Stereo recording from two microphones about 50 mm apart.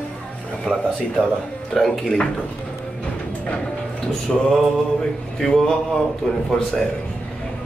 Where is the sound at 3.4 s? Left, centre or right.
Left.